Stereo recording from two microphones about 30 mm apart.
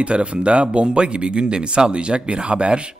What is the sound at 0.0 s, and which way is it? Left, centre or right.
Speech, right.